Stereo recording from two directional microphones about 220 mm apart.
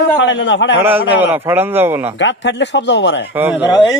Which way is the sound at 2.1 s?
55° left (ahead or behind).